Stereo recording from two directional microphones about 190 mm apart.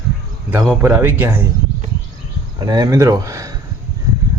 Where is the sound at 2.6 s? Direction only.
20° right (ahead or behind).